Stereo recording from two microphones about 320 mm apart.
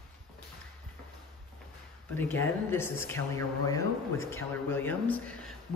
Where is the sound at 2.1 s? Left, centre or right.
Centre.